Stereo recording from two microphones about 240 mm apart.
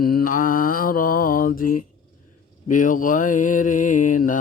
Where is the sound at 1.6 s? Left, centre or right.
Left.